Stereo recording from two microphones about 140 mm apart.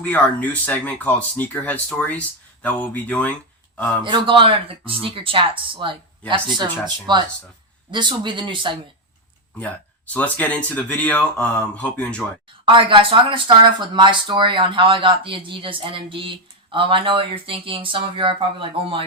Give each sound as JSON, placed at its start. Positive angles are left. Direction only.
{"t": 0.0, "sound": "speech", "side_deg": 10}
{"t": 4.0, "sound": "speech", "side_deg": -35}
{"t": 10.1, "sound": "speech", "side_deg": 10}
{"t": 12.6, "sound": "speech", "side_deg": -40}